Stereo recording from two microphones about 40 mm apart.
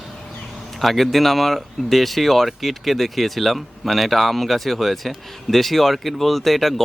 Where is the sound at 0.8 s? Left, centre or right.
Centre.